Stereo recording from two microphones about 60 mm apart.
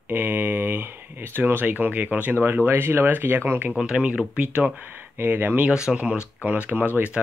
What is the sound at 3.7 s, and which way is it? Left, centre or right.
Speech, centre.